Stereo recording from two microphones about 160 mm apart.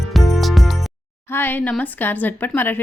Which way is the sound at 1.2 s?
15° left (ahead or behind).